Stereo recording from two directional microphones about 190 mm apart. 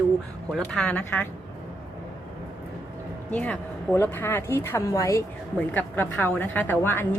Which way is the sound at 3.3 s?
5° left (ahead or behind).